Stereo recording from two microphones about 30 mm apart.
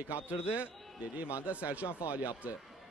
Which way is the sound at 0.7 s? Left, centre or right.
Centre.